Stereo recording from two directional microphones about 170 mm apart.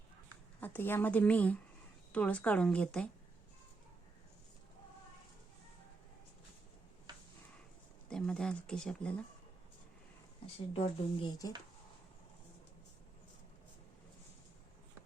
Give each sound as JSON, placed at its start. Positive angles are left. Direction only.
{"t": 0.6, "sound": "a woman's voice", "side_deg": 10}
{"t": 8.1, "sound": "speech", "side_deg": 5}
{"t": 10.4, "sound": "speech", "side_deg": 30}